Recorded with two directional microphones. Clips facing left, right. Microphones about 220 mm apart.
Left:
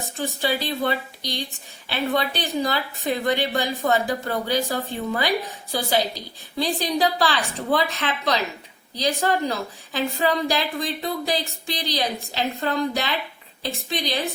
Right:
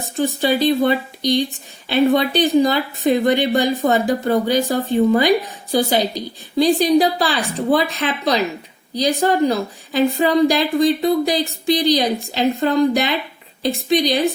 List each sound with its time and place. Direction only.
0.2 s a woman's voice: 20° right (ahead or behind)